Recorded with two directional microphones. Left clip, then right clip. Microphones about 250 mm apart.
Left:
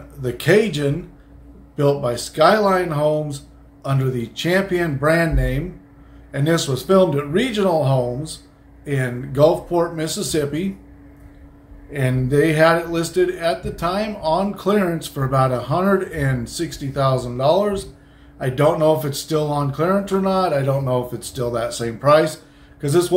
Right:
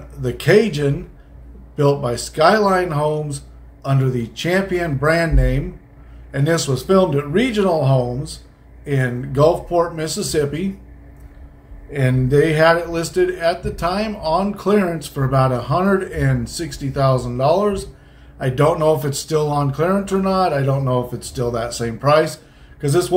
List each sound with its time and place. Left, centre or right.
0.2 s speech: centre
11.9 s speech: centre